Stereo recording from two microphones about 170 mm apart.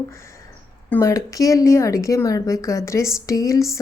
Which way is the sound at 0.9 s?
20° left (ahead or behind).